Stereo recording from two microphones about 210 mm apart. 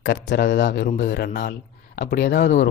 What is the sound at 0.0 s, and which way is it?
Speech, 55° left (ahead or behind).